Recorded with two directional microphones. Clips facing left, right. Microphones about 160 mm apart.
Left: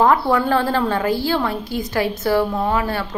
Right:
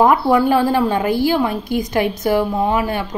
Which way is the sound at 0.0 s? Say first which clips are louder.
Right 3 dB; 15° right (ahead or behind).